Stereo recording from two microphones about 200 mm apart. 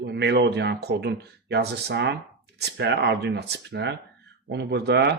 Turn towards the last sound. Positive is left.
turn(degrees=-55)  # may be behind; listen again after turning